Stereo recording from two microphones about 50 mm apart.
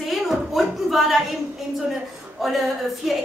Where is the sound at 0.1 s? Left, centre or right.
Centre.